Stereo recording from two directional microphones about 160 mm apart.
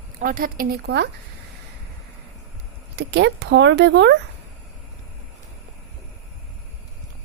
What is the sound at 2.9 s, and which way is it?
Speech, 90° right.